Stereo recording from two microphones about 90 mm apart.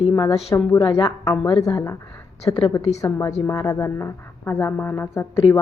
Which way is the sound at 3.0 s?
35° left (ahead or behind).